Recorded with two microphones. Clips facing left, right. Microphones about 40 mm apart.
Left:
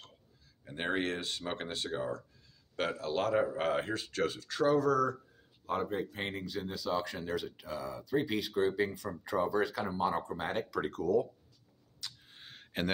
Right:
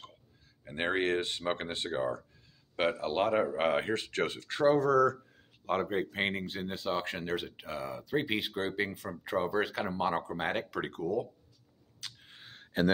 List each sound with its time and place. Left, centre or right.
0.7 s speech: right
5.7 s speech: right
6.3 s speech: right
9.8 s speech: right
11.0 s speech: right
12.0 s a sound: right